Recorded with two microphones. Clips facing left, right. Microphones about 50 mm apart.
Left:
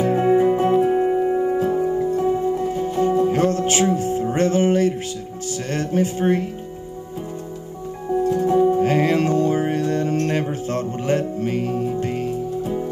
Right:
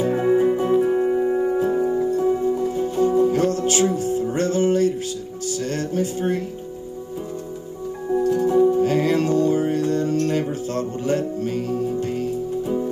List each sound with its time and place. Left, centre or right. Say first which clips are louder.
0.0 s music: left 2 dB; left
1.3 s music: left 1 dB; centre
2.0 s music: even; left
8.2 s music: even; left